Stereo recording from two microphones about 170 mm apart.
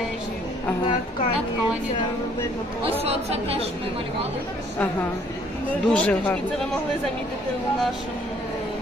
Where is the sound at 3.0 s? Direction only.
35° right (ahead or behind).